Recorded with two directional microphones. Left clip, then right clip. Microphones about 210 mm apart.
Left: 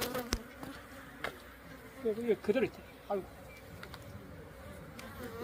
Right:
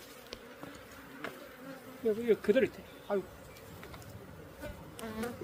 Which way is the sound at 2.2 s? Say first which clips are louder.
Right 4 dB; 30° right (ahead or behind).